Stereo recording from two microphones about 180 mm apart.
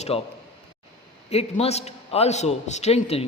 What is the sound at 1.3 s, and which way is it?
A man's voice, 35° left (ahead or behind).